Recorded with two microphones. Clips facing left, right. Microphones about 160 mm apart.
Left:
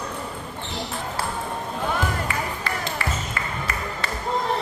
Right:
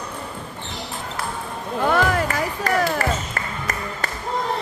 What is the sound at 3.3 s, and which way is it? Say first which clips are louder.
Music: right 1 dB; 45° right (ahead or behind).